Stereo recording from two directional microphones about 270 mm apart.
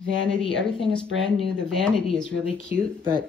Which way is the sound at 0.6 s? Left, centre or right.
Centre.